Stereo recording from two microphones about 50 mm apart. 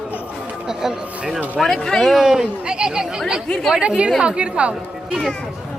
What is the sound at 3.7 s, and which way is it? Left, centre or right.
Speech, right.